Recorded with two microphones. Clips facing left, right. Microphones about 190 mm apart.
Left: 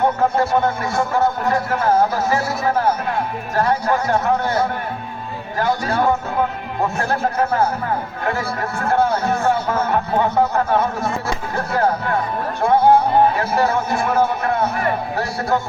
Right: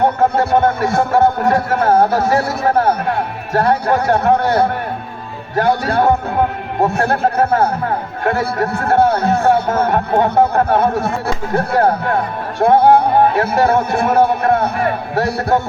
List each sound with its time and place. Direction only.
0.2 s speech: 55° right (ahead or behind)